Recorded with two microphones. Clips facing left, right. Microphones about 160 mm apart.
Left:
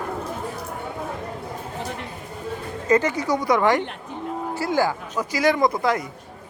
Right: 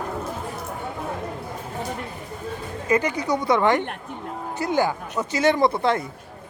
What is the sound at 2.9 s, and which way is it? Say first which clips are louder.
Speech: left 2 dB; 15° right (ahead or behind).